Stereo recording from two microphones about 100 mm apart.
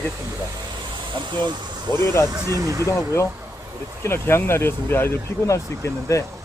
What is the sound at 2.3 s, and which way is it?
Speech, 35° right (ahead or behind).